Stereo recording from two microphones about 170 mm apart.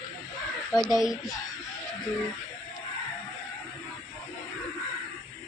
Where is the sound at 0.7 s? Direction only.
Centre (ahead or behind).